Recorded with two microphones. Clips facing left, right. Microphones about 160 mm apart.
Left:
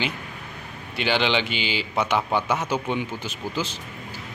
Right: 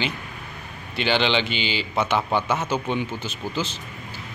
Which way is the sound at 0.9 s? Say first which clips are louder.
Right 1 dB; 10° left (ahead or behind).